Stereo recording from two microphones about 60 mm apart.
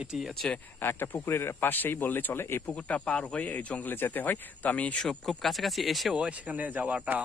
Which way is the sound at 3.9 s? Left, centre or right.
Left.